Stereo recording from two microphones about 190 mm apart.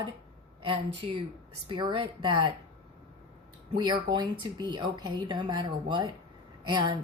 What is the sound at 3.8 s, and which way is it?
Speech, 25° right (ahead or behind).